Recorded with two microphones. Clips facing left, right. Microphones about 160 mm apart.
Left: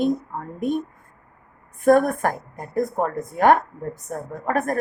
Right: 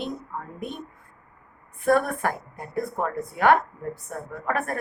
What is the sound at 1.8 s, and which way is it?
A woman's voice, 45° left (ahead or behind).